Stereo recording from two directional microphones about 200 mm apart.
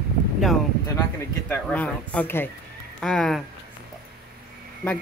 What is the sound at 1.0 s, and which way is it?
Speech, 5° left (ahead or behind).